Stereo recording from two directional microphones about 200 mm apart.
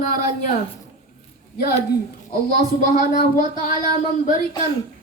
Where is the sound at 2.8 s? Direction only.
40° left (ahead or behind).